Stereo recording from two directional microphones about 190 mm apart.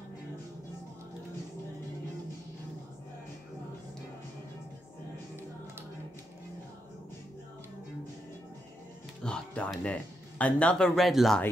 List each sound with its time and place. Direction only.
9.2 s speech: 5° left (ahead or behind)